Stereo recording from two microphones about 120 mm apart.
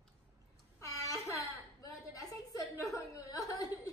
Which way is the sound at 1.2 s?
25° left (ahead or behind).